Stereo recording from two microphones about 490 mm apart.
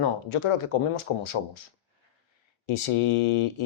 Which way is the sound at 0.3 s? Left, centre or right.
Left.